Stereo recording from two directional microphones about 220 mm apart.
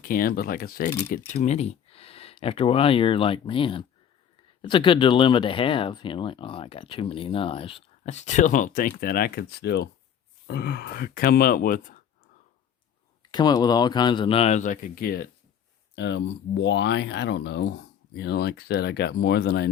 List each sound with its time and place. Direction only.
0.0 s speech: 40° left (ahead or behind)
13.3 s speech: 20° left (ahead or behind); by 15.3 s 40° left (ahead or behind)
16.0 s speech: 55° left (ahead or behind)